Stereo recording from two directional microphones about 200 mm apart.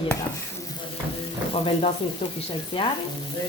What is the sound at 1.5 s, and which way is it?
Speech, 25° left (ahead or behind).